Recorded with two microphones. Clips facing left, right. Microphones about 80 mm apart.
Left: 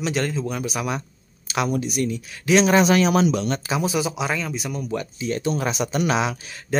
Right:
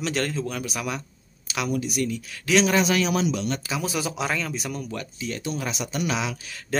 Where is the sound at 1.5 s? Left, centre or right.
Left.